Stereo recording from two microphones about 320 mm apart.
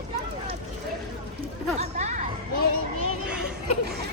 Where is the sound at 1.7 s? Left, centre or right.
Right.